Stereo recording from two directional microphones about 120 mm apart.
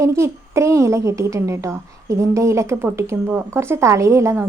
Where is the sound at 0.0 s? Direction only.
25° right (ahead or behind).